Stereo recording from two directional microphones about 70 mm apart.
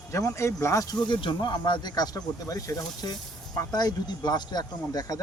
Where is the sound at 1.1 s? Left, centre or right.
Left.